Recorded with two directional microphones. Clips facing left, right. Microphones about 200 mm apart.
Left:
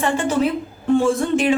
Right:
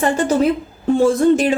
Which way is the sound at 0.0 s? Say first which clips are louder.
Right 3 dB; 40° right (ahead or behind).